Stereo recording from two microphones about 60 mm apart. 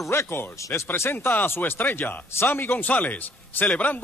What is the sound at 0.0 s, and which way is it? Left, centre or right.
Speech, left.